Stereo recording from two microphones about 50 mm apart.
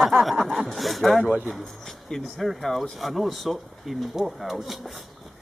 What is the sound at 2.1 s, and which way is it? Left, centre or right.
Speech, centre.